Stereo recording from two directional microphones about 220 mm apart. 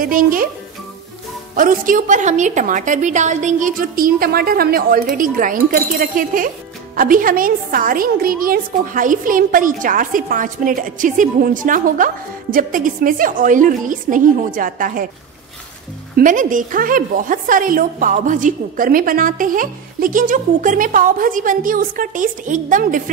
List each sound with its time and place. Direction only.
0.0 s a woman's voice: 40° right (ahead or behind)
1.6 s a woman's voice: 35° right (ahead or behind)
16.2 s a woman's voice: 35° right (ahead or behind)